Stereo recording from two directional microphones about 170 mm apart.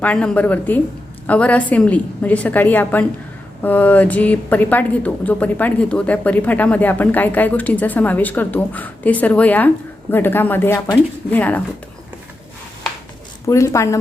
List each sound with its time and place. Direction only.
0.0 s a woman's voice: 10° left (ahead or behind)
13.5 s a woman's voice: 15° left (ahead or behind)